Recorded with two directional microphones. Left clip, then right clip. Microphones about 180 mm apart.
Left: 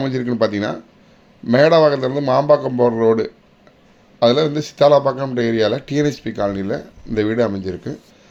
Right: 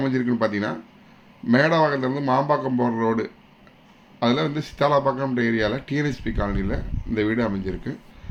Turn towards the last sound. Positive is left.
turn(degrees=15)  # may be behind; listen again after turning